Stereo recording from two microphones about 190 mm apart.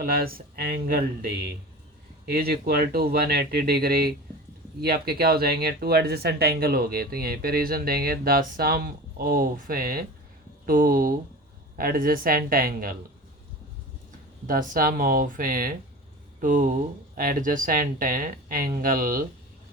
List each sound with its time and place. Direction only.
0.0 s speech: 50° right (ahead or behind)
2.2 s speech: 55° right (ahead or behind)
14.4 s speech: 50° right (ahead or behind)